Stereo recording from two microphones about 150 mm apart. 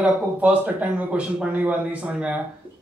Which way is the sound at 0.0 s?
10° right (ahead or behind).